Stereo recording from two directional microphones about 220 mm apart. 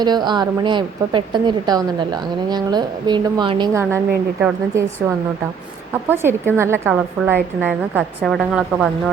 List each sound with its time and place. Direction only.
0.0 s a woman's voice: 20° right (ahead or behind); by 8.9 s centre (ahead or behind)